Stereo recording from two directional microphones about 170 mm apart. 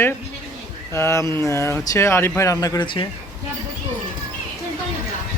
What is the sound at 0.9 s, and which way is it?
Speech, 15° left (ahead or behind).